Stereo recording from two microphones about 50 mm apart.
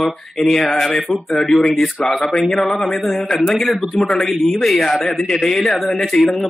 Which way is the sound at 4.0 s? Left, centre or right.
Centre.